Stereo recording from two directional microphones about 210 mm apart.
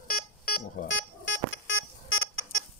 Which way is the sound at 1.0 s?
60° left (ahead or behind).